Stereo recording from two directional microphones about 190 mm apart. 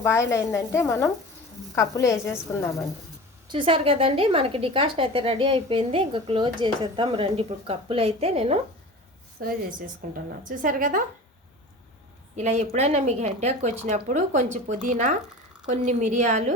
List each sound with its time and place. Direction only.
0.0 s speech: 15° left (ahead or behind)
3.5 s a woman's voice: 25° right (ahead or behind)
9.4 s a woman's voice: 50° right (ahead or behind)
12.4 s speech: 35° right (ahead or behind)